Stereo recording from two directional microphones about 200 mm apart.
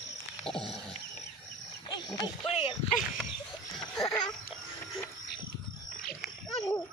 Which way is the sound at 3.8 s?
5° left (ahead or behind).